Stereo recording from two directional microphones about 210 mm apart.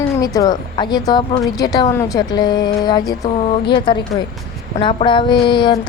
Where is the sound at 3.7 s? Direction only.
25° left (ahead or behind).